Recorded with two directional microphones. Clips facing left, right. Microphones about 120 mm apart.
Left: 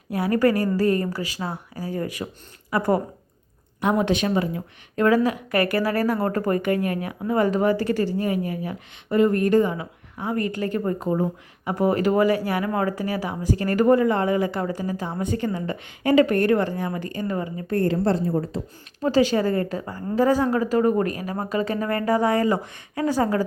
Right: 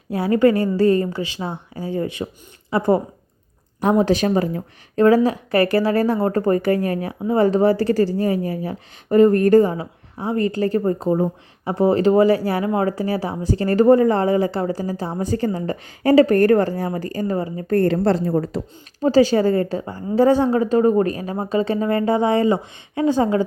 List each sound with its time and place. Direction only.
0.1 s speech: 25° right (ahead or behind)
3.8 s speech: 35° right (ahead or behind)
17.7 s a woman's voice: 70° right (ahead or behind); by 18.6 s 85° right
19.0 s speech: 30° right (ahead or behind)